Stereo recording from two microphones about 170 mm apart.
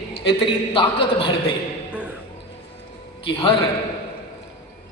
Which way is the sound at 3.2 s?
30° left (ahead or behind).